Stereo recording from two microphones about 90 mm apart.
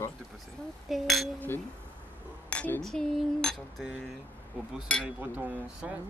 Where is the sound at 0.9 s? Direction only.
Centre (ahead or behind).